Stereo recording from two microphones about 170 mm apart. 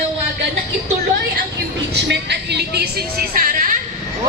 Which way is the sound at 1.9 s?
85° right.